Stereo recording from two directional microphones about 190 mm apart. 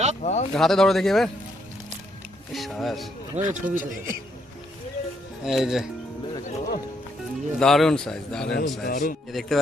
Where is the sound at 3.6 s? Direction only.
45° right (ahead or behind).